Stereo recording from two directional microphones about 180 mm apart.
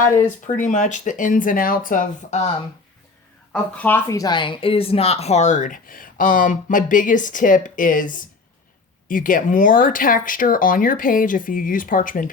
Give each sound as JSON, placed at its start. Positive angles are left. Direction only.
{"t": 0.0, "sound": "speech", "side_deg": 45}
{"t": 3.5, "sound": "speech", "side_deg": 10}